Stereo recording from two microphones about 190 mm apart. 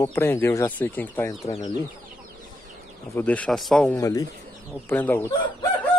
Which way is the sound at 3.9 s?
20° left (ahead or behind).